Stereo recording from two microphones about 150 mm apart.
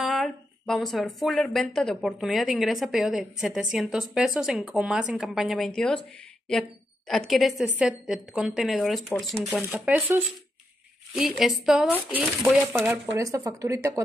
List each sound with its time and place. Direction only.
0.0 s a woman's voice: centre (ahead or behind)
7.1 s a woman's voice: centre (ahead or behind)
9.8 s a woman's voice: 10° right (ahead or behind)
13.2 s speech: 20° right (ahead or behind)